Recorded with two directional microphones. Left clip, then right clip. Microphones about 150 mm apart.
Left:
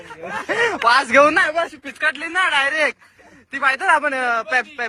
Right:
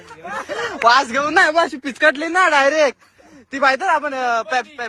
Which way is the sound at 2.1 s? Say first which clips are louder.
Right 4 dB; 30° right (ahead or behind).